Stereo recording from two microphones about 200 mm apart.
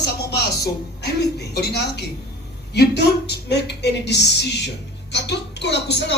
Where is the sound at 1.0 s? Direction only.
55° left (ahead or behind).